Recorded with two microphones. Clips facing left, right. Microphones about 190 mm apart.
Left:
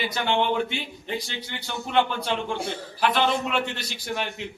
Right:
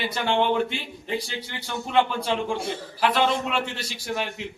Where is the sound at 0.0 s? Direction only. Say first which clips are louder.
Right 1 dB; centre (ahead or behind).